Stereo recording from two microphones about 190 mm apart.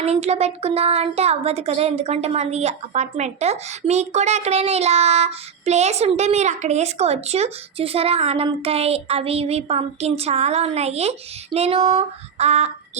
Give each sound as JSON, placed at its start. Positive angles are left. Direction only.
{"t": 0.0, "sound": "speech", "side_deg": -35}